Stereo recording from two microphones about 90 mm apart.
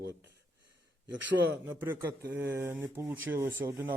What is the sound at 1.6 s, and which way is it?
A man's voice, 25° right (ahead or behind).